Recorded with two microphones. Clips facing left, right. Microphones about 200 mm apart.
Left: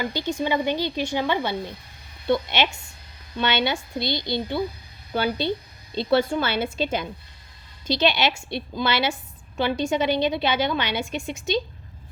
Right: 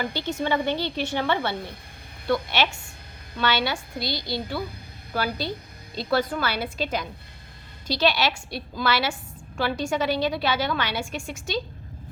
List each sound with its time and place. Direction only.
0.0 s a woman's voice: 15° left (ahead or behind)